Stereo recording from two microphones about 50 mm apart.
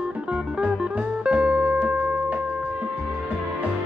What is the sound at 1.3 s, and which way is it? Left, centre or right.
Music, right.